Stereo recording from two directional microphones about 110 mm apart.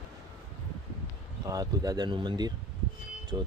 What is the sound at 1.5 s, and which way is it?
Speech, 35° right (ahead or behind).